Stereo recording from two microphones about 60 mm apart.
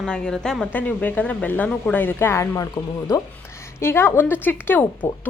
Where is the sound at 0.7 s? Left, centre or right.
Left.